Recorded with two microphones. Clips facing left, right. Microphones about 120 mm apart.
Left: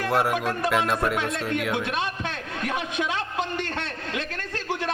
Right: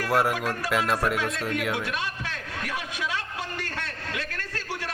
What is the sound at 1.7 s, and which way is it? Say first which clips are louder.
A man's voice: left 3 dB; 25° left (ahead or behind).